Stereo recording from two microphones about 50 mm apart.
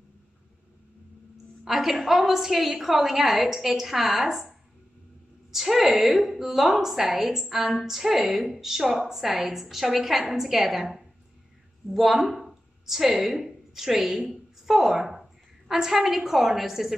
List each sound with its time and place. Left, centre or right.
1.6 s a woman's voice: centre